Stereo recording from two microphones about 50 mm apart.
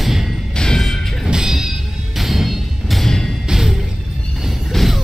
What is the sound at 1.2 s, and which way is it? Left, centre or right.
Music, centre.